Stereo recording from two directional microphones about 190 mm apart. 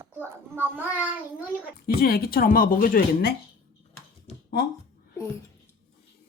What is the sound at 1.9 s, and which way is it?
A woman's voice, 55° left (ahead or behind).